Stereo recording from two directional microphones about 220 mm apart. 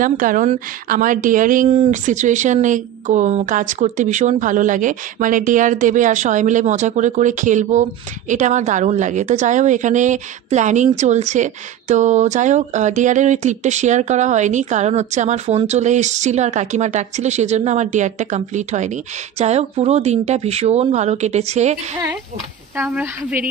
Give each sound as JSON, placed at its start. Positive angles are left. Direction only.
{"t": 0.0, "sound": "speech", "side_deg": -35}
{"t": 22.8, "sound": "a woman's voice", "side_deg": -5}